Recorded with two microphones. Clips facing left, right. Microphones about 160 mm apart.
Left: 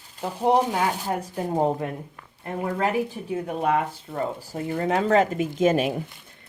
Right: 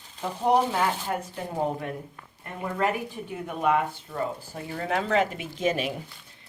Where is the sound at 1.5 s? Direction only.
35° left (ahead or behind).